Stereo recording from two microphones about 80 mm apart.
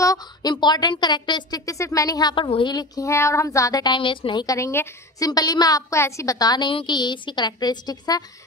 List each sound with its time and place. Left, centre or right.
0.0 s a woman's voice: left
1.7 s speech: left
2.3 s a woman's voice: left
3.0 s a woman's voice: left
3.8 s a woman's voice: left
4.5 s a woman's voice: left
5.3 s a woman's voice: left